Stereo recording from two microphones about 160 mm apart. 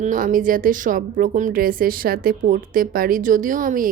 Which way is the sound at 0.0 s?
55° right (ahead or behind).